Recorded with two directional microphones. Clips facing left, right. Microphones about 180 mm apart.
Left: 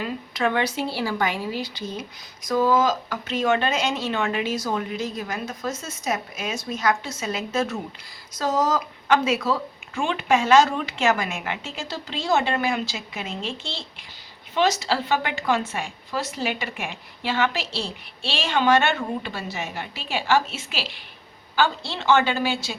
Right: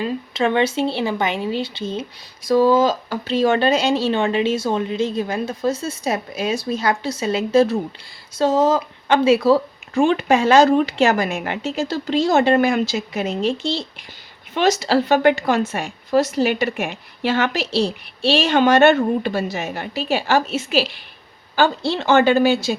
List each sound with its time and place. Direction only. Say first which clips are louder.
0.0 s speech: right 5 dB; 25° right (ahead or behind)
14.5 s speech: right 5 dB; 50° right (ahead or behind)
15.8 s a woman's voice: right 11 dB; 65° right (ahead or behind)
18.5 s speech: right 6 dB; 45° right (ahead or behind)